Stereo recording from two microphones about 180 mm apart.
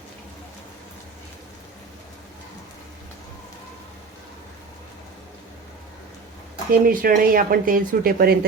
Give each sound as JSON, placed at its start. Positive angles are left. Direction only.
{"t": 6.7, "sound": "speech", "side_deg": -55}